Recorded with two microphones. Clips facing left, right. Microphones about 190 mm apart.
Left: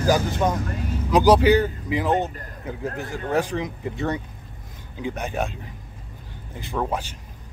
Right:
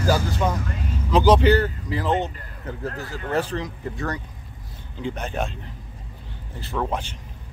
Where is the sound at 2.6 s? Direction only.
15° left (ahead or behind).